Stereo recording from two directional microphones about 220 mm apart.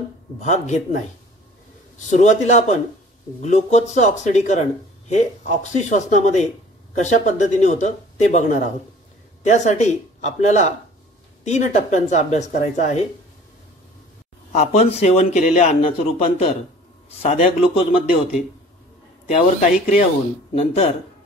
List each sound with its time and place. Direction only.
0.4 s speech: 35° left (ahead or behind)
2.0 s speech: 35° left (ahead or behind)
14.5 s a man's voice: 30° left (ahead or behind)
19.2 s a man's voice: 30° left (ahead or behind)